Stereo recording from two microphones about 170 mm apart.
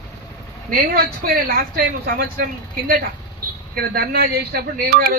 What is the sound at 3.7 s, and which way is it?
Speech, 65° right (ahead or behind).